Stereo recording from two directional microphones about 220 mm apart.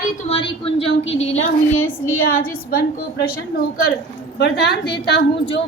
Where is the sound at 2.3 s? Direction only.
40° left (ahead or behind).